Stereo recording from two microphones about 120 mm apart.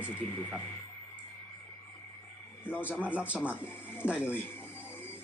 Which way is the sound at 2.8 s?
15° left (ahead or behind).